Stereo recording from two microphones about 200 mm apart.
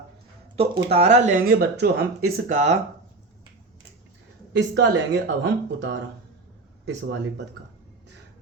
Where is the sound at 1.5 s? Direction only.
50° right (ahead or behind).